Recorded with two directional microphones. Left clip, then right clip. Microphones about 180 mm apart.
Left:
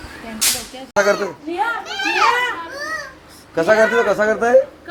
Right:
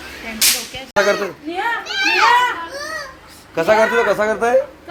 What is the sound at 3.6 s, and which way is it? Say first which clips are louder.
Speech: even; 30° left (ahead or behind).